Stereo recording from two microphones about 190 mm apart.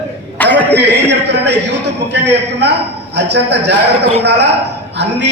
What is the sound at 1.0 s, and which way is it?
Speech, 65° right (ahead or behind).